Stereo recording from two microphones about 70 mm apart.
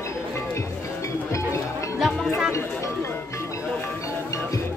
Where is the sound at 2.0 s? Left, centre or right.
Centre.